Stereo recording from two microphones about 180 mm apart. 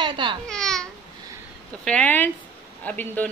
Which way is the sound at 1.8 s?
10° left (ahead or behind).